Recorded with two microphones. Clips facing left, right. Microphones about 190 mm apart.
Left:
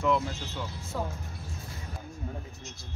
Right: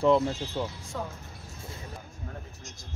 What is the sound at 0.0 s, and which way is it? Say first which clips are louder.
Speech: right 5 dB; 30° right (ahead or behind).